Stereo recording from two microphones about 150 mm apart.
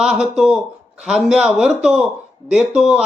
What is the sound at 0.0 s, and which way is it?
Speech, 5° right (ahead or behind).